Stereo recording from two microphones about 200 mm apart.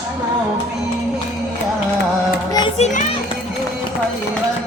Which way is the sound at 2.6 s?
30° left (ahead or behind).